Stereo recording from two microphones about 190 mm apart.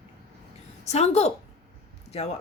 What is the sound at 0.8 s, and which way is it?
A woman's voice, 35° left (ahead or behind).